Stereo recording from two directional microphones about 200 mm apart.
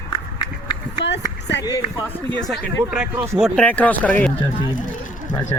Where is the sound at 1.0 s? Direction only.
60° left (ahead or behind).